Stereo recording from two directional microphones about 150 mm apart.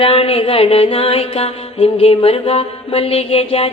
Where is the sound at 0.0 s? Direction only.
40° left (ahead or behind).